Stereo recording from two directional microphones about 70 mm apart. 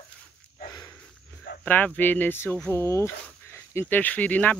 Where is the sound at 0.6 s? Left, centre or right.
Left.